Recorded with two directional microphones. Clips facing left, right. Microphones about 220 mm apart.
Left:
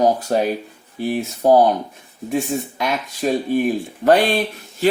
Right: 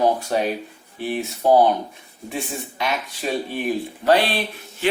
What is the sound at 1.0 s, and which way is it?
Speech, 40° left (ahead or behind).